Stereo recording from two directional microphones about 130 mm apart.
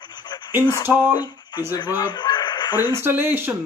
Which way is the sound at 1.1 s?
35° left (ahead or behind).